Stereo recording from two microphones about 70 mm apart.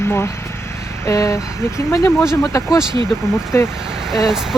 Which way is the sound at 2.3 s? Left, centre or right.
Left.